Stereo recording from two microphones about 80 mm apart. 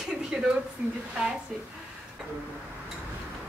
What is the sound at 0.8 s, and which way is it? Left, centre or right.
Speech, centre.